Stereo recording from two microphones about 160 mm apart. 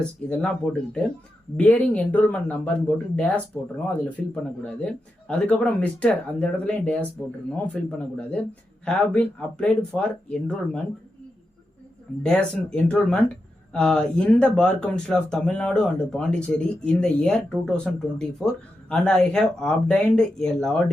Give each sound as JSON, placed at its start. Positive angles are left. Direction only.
{"t": 0.0, "sound": "speech", "side_deg": 5}
{"t": 12.2, "sound": "speech", "side_deg": 5}